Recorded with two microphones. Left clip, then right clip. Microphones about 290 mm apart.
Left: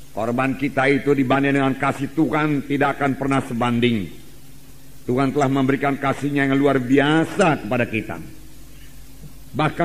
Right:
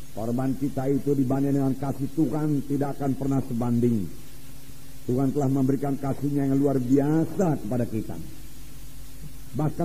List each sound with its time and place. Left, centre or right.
0.1 s a man's voice: left
5.1 s a man's voice: left